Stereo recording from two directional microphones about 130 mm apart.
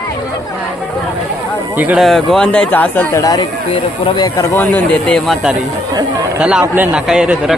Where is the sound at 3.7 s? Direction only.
40° left (ahead or behind).